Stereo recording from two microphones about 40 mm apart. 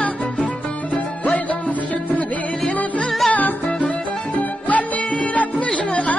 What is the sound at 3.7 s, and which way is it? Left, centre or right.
Music, left.